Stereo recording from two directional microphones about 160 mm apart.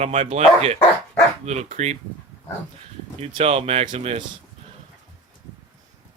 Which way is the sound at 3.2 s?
40° right (ahead or behind).